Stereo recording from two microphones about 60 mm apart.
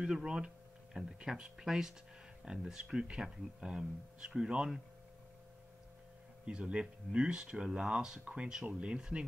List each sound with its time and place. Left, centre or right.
0.0 s speech: centre
6.4 s speech: centre